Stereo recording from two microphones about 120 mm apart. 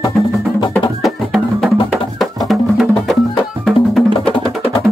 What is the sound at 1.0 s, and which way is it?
Music, centre (ahead or behind).